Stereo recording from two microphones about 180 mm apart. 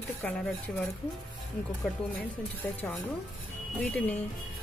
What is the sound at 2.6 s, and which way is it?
Speech, 10° left (ahead or behind).